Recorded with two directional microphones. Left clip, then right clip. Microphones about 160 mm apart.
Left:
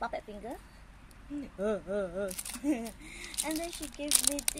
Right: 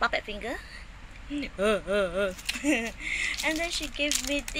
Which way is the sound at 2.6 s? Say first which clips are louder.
Right 6 dB; 15° left (ahead or behind).